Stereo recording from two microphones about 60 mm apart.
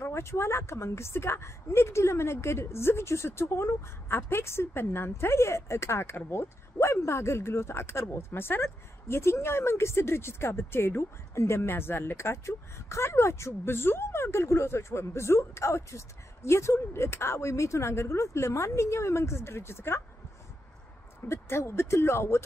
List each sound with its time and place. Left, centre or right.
0.0 s a woman's voice: left
21.3 s a woman's voice: left